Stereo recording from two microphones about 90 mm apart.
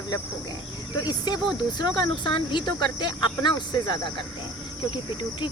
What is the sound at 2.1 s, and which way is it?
Speech, 60° left (ahead or behind).